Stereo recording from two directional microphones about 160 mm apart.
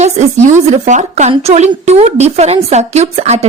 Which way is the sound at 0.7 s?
45° right (ahead or behind).